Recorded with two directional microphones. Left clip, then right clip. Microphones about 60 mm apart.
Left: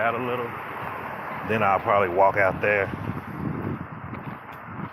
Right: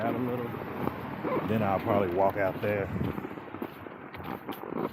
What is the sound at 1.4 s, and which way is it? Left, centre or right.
Speech, left.